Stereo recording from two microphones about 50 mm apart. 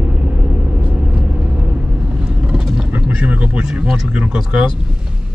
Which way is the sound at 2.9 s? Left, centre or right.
Right.